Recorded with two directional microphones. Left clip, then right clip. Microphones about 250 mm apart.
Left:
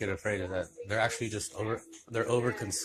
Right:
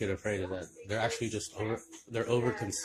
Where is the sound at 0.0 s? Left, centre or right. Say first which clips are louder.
Left 1 dB; centre.